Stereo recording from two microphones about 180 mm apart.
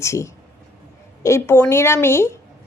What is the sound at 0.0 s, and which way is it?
A woman's voice, 15° left (ahead or behind).